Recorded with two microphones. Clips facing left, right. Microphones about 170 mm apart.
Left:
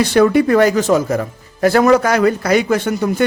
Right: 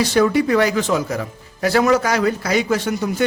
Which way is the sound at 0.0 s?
60° left (ahead or behind).